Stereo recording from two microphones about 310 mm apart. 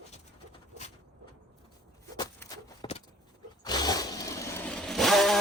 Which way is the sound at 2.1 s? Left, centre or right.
Centre.